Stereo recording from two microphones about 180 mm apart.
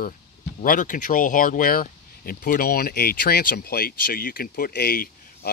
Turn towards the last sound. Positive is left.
turn(degrees=55)  # may be behind; listen again after turning